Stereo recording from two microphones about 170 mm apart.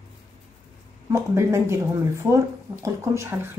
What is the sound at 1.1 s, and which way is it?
Speech, 15° right (ahead or behind).